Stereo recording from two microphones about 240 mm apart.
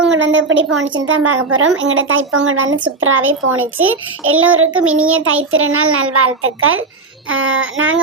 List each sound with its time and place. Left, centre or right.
0.1 s a woman's voice: right